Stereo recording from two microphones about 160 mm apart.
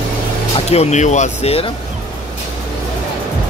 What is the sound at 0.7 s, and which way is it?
Speech, 45° left (ahead or behind).